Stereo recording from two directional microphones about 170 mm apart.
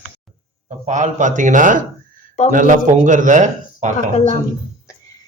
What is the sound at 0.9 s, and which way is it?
A man's voice, 45° right (ahead or behind).